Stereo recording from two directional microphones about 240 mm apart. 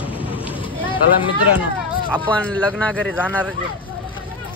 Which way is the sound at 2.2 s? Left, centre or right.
Centre.